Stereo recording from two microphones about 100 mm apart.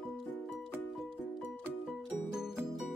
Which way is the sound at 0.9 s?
Centre (ahead or behind).